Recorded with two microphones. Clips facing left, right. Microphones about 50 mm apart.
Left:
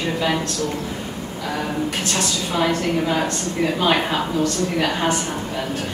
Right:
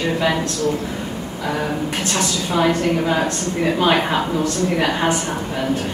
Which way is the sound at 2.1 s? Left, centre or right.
Centre.